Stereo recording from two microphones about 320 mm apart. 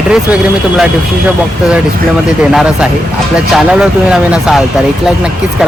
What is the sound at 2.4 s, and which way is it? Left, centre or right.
Speech, centre.